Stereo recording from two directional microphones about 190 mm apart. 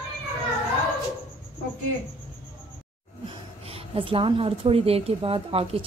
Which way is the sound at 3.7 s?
30° right (ahead or behind).